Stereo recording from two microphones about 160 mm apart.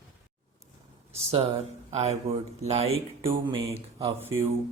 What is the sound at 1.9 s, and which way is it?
Speech, 40° right (ahead or behind).